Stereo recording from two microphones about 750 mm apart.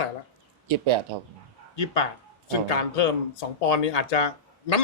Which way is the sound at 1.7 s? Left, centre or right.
Left.